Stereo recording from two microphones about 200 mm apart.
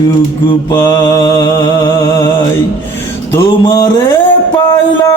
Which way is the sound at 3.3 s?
20° left (ahead or behind).